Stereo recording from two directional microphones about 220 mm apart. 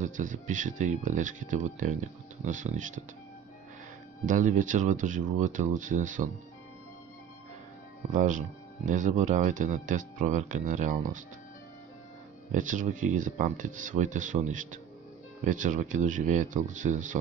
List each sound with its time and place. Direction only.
0.0 s speech: 35° right (ahead or behind)
4.3 s speech: 35° right (ahead or behind)
8.1 s speech: 35° right (ahead or behind)
12.5 s speech: 35° right (ahead or behind)